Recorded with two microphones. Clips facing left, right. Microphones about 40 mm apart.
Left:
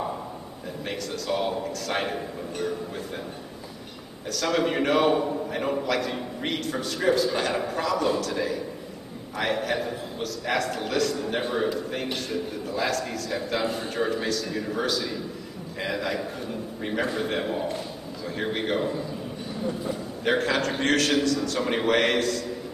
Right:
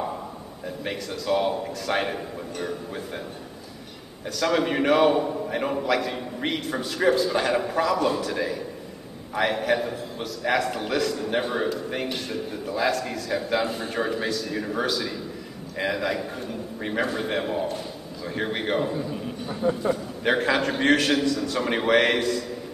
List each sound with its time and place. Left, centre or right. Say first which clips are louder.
0.8 s a man's voice: right 2 dB; centre
4.3 s a man's voice: right 1 dB; centre
19.6 s a man's voice: right 7 dB; right
20.2 s a man's voice: right 2 dB; centre